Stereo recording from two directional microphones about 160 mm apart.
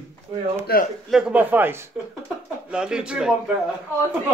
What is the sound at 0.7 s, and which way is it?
Speech, 75° left (ahead or behind).